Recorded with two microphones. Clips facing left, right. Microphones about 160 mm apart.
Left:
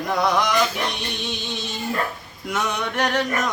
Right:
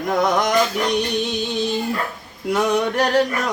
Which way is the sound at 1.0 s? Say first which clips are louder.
Right 9 dB; 40° right (ahead or behind).